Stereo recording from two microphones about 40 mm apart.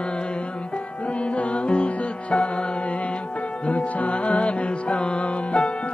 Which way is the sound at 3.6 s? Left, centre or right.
Left.